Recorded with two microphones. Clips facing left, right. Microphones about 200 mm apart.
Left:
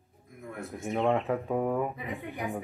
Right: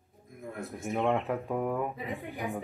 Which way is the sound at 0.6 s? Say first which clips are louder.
Left 2 dB; centre (ahead or behind).